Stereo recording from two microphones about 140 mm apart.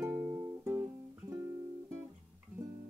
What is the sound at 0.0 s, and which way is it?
Music, 15° right (ahead or behind).